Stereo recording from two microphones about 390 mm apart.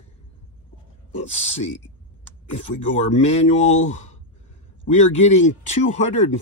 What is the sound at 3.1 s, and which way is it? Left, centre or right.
Speech, centre.